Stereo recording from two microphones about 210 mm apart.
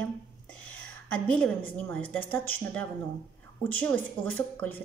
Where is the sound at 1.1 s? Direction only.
5° left (ahead or behind).